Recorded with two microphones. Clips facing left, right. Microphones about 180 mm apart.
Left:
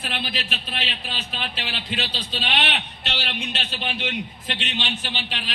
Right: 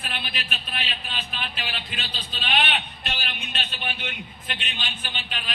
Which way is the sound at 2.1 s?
80° left.